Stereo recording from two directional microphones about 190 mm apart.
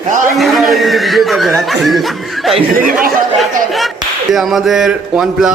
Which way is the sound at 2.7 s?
50° right (ahead or behind).